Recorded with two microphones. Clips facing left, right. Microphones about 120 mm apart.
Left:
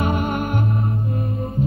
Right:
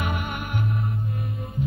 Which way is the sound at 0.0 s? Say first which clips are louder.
Left 8 dB; 35° left (ahead or behind).